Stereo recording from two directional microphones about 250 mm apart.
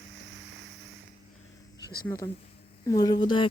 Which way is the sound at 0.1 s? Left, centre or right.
Right.